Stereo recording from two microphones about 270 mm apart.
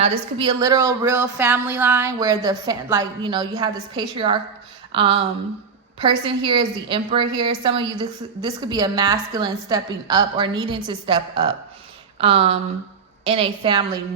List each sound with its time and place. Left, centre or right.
0.0 s speech: right
4.9 s a sound: centre
6.0 s a woman's voice: centre